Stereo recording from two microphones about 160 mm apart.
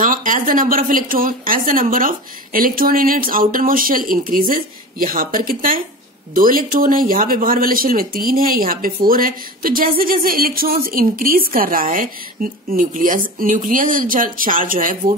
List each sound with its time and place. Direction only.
0.0 s speech: 55° right (ahead or behind)